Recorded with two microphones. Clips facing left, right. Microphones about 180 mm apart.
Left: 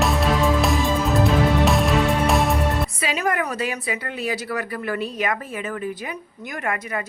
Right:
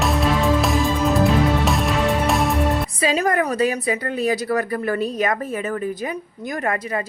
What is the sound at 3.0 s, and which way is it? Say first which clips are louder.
A woman's voice: right 6 dB; 35° right (ahead or behind).